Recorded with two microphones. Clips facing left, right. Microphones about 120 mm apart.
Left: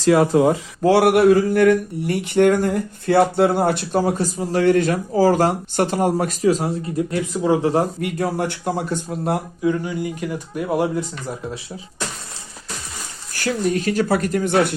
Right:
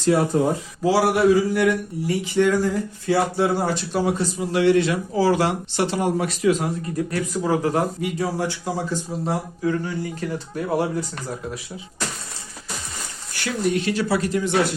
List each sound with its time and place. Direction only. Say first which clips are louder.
0.0 s speech: left 4 dB; 90° left
0.8 s speech: left 4 dB; 60° left (ahead or behind)
4.0 s speech: left 2 dB; 40° left (ahead or behind)
8.0 s speech: left 2 dB; 60° left (ahead or behind)
9.6 s speech: left 3 dB; 15° left (ahead or behind)
13.7 s speech: left 3 dB; 45° left (ahead or behind)